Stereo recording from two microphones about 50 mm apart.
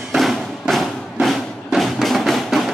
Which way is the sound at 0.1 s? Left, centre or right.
Centre.